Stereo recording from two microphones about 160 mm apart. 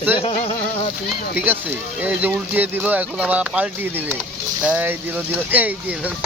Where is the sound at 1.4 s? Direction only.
10° right (ahead or behind).